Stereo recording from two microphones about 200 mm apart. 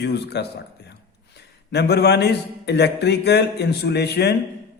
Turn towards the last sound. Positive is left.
turn(degrees=55)  # may be behind; listen again after turning